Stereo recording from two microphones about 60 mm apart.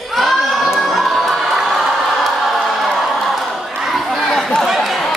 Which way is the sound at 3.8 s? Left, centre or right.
Centre.